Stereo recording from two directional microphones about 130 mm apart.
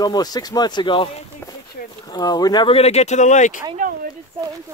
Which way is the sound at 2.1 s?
30° left (ahead or behind).